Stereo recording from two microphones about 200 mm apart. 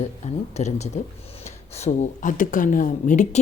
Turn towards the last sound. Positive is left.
turn(degrees=40)  # may be behind; listen again after turning